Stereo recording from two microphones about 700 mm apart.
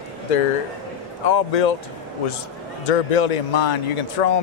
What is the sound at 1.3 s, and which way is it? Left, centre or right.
Speech, left.